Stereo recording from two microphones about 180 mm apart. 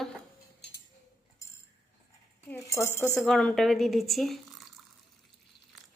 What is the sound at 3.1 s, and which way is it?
Speech, centre (ahead or behind).